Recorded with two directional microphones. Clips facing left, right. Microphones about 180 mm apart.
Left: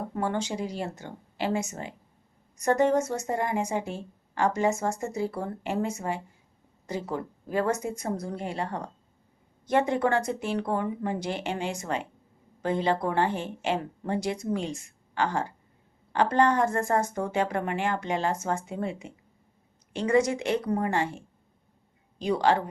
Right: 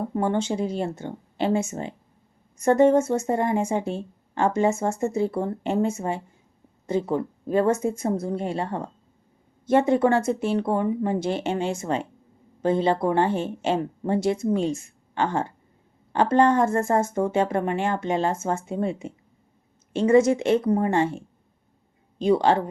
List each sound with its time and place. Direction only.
0.1 s speech: 25° right (ahead or behind)
22.2 s speech: 25° right (ahead or behind)